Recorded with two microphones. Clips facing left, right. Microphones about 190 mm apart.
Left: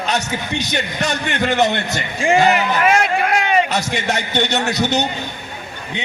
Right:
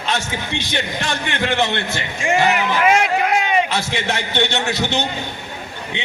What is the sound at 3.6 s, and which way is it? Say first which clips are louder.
A man's voice: left 2 dB; 40° left (ahead or behind).